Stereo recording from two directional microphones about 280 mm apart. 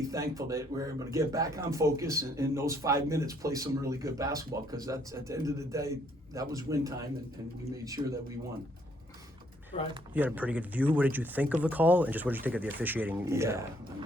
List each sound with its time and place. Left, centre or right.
0.1 s speech: centre
9.7 s speech: left
10.2 s speech: centre